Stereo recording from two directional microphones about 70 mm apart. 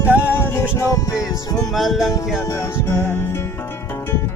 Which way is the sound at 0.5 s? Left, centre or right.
Left.